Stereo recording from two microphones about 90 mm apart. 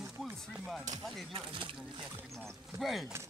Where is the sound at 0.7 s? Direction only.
Centre (ahead or behind).